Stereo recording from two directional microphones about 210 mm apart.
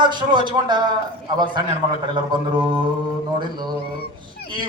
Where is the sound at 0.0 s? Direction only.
20° right (ahead or behind).